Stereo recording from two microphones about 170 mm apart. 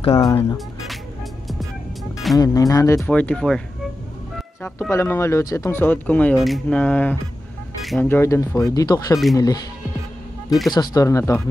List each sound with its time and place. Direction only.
0.1 s speech: 20° left (ahead or behind)
2.3 s speech: 20° left (ahead or behind)
3.0 s speech: 5° left (ahead or behind)
4.6 s speech: 15° left (ahead or behind)
7.8 s vehicle: centre (ahead or behind)
8.1 s speech: 15° left (ahead or behind)
10.7 s speech: 25° left (ahead or behind)